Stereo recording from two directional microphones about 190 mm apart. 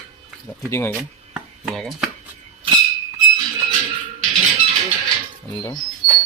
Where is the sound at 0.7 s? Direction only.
15° left (ahead or behind).